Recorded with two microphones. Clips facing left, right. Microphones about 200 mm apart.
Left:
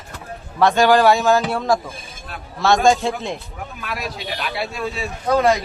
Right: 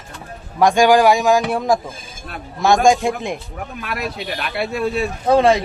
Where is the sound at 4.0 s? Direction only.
55° right (ahead or behind).